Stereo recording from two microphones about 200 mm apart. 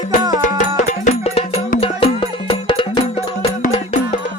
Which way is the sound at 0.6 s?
35° left (ahead or behind).